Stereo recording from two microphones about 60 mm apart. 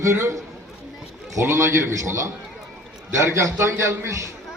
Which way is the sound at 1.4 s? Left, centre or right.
Right.